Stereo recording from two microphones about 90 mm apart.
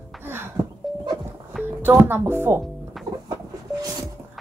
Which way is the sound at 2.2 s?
25° right (ahead or behind).